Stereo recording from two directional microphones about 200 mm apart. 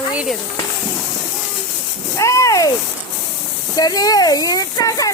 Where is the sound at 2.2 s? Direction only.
15° left (ahead or behind).